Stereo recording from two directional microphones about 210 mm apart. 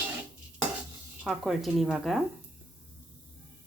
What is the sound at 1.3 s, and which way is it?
Dishes, centre (ahead or behind).